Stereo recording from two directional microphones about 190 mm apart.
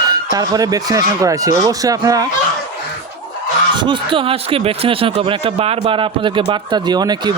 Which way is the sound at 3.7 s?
25° right (ahead or behind).